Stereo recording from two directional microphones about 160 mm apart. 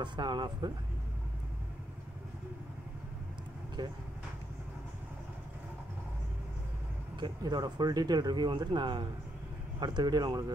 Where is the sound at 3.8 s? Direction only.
25° right (ahead or behind).